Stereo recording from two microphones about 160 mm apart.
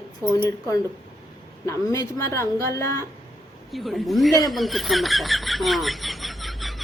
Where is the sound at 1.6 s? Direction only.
20° left (ahead or behind).